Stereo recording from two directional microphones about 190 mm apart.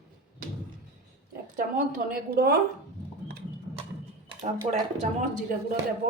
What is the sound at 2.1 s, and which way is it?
Speech, 50° right (ahead or behind).